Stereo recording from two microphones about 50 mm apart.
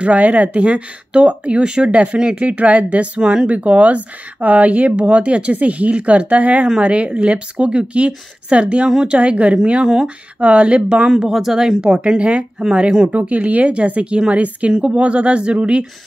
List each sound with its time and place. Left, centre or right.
0.0 s speech: right
11.1 s speech: centre